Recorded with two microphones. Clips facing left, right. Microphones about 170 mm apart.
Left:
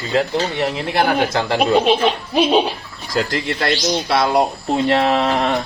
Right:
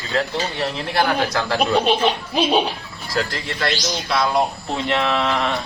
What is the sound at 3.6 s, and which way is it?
Speech, 40° left (ahead or behind).